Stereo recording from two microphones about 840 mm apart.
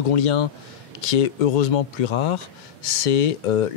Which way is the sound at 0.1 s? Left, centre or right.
Left.